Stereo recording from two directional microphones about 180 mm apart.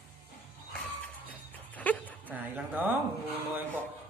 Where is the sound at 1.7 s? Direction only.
10° left (ahead or behind).